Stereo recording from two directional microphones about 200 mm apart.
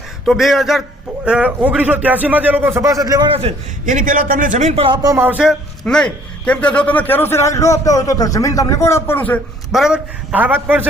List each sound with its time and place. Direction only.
0.3 s a man's voice: centre (ahead or behind); by 3.2 s 20° right (ahead or behind)
3.3 s a man's voice: 35° right (ahead or behind)
5.0 s a man's voice: 10° right (ahead or behind); by 9.4 s 10° left (ahead or behind)
9.7 s a man's voice: 5° right (ahead or behind)